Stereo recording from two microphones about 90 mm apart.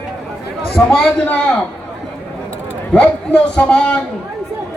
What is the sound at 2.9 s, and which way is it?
Speech, 10° left (ahead or behind).